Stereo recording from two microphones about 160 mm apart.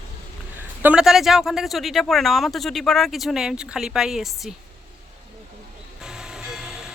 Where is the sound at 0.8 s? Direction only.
5° right (ahead or behind).